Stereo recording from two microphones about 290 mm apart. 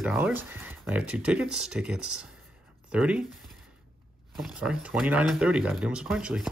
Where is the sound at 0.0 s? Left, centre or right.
Centre.